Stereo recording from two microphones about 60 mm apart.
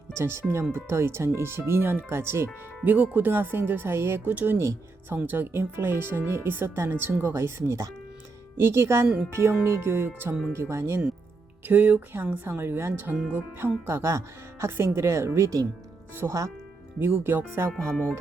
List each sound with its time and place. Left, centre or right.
0.1 s speech: right
2.8 s speech: right
4.2 s speech: right
4.5 s speech: right
5.0 s speech: right
9.0 s speech: centre
9.3 s speech: right
11.6 s speech: right
13.8 s speech: right
16.2 s speech: right
17.7 s speech: centre